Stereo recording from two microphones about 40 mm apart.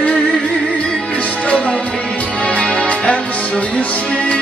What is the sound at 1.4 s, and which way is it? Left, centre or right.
Music, left.